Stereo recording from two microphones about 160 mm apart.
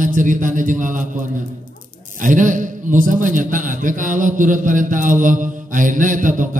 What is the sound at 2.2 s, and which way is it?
A man's voice, 55° right (ahead or behind).